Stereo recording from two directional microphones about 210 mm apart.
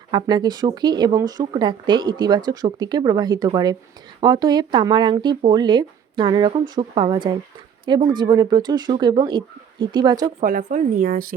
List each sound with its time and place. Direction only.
0.1 s speech: 20° right (ahead or behind)
10.4 s speech: 40° right (ahead or behind)